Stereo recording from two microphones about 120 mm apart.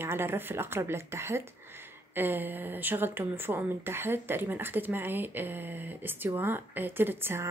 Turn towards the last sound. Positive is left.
turn(degrees=-20)  # may be behind; listen again after turning